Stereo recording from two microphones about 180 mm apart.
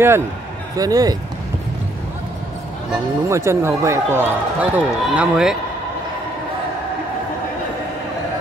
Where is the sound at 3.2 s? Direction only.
15° right (ahead or behind).